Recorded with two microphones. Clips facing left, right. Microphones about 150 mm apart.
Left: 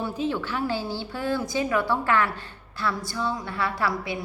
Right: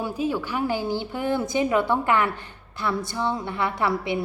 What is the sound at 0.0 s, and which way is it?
A woman's voice, 10° right (ahead or behind).